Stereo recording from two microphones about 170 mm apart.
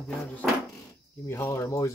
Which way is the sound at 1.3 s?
15° left (ahead or behind).